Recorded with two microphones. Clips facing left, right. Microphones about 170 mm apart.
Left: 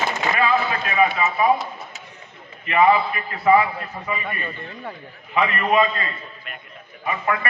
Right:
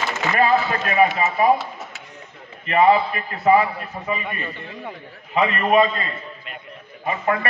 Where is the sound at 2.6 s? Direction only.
35° right (ahead or behind).